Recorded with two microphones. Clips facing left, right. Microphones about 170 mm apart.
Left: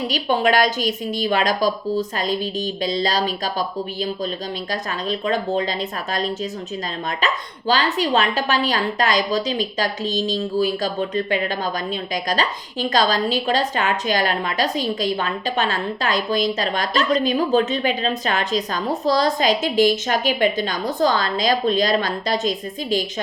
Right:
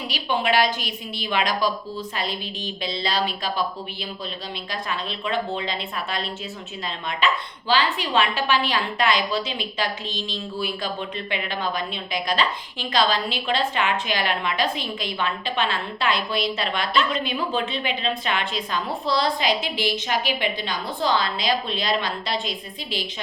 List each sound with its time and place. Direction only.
0.1 s a woman's voice: 45° left (ahead or behind)